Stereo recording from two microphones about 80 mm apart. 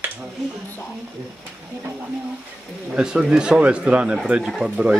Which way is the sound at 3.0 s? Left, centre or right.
Centre.